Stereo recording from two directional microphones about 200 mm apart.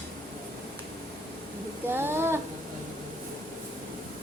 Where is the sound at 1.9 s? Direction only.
10° right (ahead or behind).